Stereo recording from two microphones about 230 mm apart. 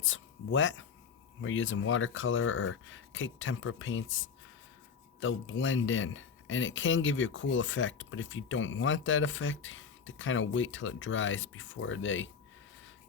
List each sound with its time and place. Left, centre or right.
0.0 s speech: left